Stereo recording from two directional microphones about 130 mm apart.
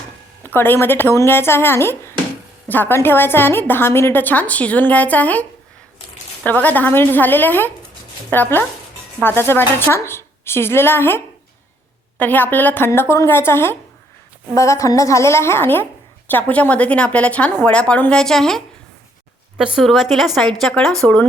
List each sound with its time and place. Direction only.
0.4 s a woman's voice: 15° left (ahead or behind)